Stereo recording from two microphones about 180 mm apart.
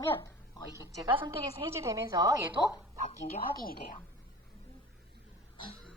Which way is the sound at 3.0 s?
50° left (ahead or behind).